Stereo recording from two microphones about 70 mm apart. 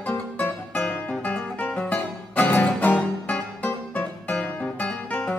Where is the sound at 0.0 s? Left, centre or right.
Left.